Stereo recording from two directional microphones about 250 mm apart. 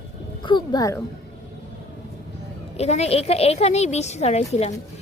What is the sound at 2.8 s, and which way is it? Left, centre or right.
Speech, left.